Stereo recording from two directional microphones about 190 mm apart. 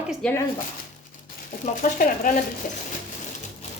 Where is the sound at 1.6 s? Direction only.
45° left (ahead or behind).